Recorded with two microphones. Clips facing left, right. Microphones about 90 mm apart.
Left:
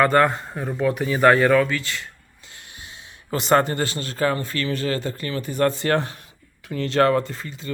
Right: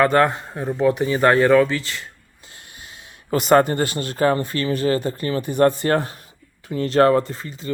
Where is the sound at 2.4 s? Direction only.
50° right (ahead or behind).